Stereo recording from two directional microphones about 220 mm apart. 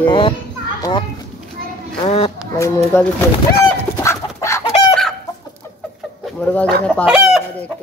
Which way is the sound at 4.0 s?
15° left (ahead or behind).